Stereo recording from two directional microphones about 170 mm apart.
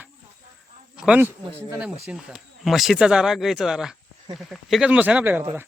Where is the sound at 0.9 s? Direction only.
5° right (ahead or behind).